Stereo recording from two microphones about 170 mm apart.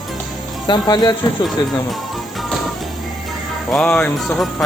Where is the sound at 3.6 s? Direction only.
5° left (ahead or behind).